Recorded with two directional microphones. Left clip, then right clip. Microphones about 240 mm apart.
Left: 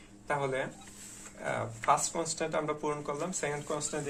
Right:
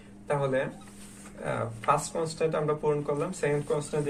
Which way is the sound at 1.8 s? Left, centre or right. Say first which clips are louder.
Right 2 dB; left.